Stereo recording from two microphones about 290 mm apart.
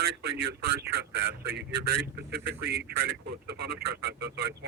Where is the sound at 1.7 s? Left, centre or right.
Right.